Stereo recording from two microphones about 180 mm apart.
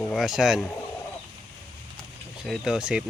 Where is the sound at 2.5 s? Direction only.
5° right (ahead or behind).